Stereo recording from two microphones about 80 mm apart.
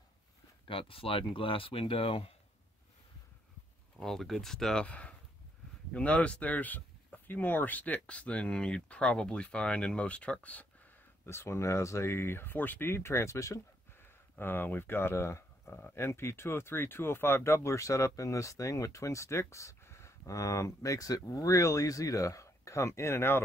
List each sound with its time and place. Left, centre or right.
0.7 s speech: left
4.0 s speech: centre
11.2 s speech: left
14.3 s speech: left
16.0 s speech: left